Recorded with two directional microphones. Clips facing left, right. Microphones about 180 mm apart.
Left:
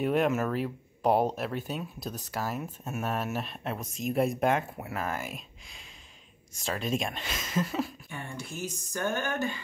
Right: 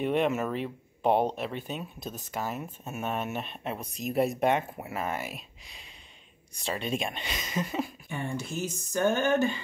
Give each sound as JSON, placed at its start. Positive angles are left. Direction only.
{"t": 0.0, "sound": "speech", "side_deg": 0}
{"t": 8.1, "sound": "speech", "side_deg": -20}